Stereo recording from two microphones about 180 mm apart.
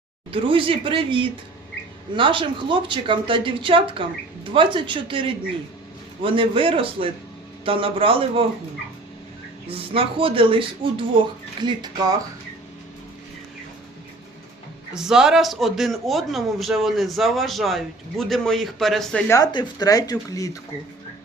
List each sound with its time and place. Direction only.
0.3 s a man's voice: 30° right (ahead or behind)
9.6 s speech: 30° right (ahead or behind)
14.9 s a man's voice: 5° right (ahead or behind)
19.3 s speech: 20° left (ahead or behind)